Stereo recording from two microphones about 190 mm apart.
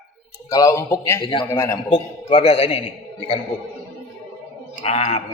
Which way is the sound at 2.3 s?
30° left (ahead or behind).